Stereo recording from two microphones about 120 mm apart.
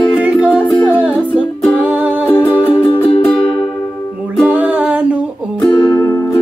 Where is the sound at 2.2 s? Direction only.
15° left (ahead or behind).